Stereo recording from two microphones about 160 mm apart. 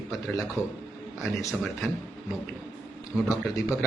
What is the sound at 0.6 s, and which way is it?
Speech, 15° left (ahead or behind).